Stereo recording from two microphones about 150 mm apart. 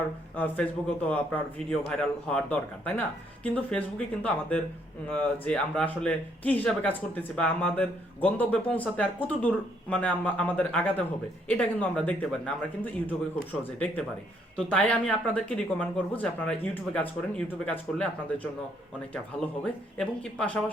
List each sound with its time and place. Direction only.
0.3 s speech: 10° left (ahead or behind)
19.6 s speech: 5° left (ahead or behind)